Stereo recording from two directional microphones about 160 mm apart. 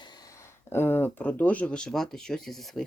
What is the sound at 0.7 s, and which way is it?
Speech, 15° left (ahead or behind).